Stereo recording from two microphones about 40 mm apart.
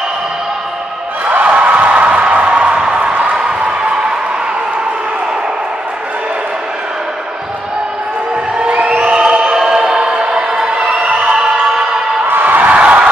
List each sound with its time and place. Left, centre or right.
1.2 s a sound: right
9.0 s choir: right
9.8 s music: right
10.8 s music: right
11.2 s music: right
12.4 s a sound: right